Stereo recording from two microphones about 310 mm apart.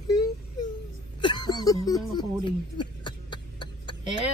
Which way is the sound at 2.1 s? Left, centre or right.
Centre.